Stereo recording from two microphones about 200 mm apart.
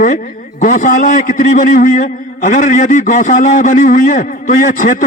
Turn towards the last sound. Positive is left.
turn(degrees=40)  # may be behind; listen again after turning